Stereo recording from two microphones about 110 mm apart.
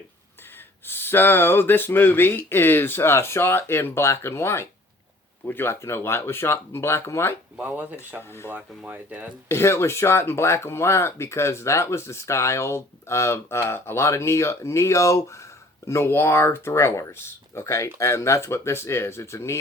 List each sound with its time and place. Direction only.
0.9 s speech: 20° left (ahead or behind)
7.6 s speech: 15° right (ahead or behind)
9.5 s speech: 25° left (ahead or behind)